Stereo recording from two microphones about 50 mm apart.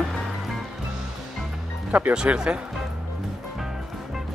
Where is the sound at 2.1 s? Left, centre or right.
Centre.